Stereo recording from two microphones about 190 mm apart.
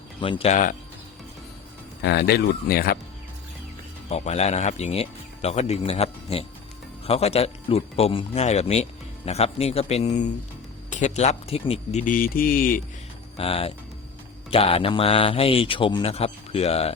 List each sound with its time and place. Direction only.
0.2 s speech: 30° left (ahead or behind)
2.0 s speech: 60° left (ahead or behind)
4.1 s speech: 35° left (ahead or behind)
13.3 s speech: 30° left (ahead or behind)